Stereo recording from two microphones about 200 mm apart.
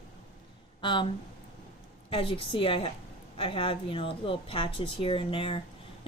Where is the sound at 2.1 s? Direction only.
25° left (ahead or behind).